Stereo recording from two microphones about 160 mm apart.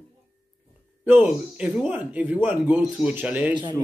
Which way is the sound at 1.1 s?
5° right (ahead or behind).